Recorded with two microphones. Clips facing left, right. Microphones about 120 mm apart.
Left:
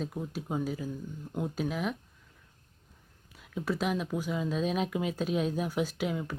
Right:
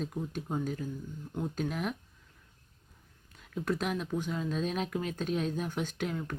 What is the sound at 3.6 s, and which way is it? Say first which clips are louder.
Speech: left 2 dB; 5° left (ahead or behind).